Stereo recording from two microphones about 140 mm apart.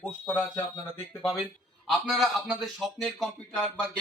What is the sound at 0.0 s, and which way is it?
Speech, 15° left (ahead or behind).